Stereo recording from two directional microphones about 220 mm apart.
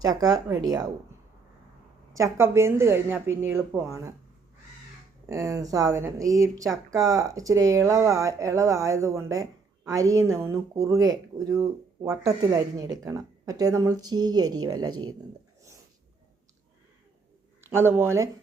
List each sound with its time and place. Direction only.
0.2 s speech: 15° right (ahead or behind)
2.1 s speech: 15° right (ahead or behind)
5.2 s speech: 15° right (ahead or behind)
14.8 s speech: 75° right (ahead or behind)
17.7 s speech: 10° right (ahead or behind)